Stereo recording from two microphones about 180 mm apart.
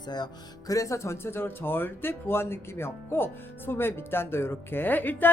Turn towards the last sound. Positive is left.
turn(degrees=10)  # may be behind; listen again after turning